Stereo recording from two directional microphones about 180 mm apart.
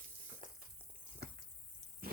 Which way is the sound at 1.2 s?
60° right (ahead or behind).